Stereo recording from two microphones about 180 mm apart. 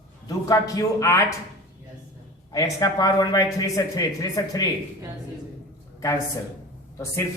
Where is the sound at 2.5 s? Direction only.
20° left (ahead or behind).